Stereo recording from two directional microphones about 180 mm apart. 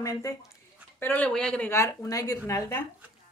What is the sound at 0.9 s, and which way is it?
Speech, 10° left (ahead or behind).